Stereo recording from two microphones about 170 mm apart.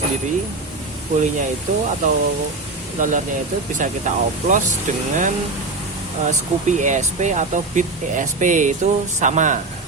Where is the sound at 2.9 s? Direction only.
50° right (ahead or behind).